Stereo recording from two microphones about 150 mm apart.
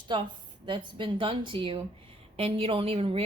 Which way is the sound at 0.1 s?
30° right (ahead or behind).